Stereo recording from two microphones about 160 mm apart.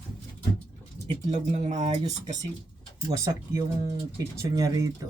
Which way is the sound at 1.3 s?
45° right (ahead or behind).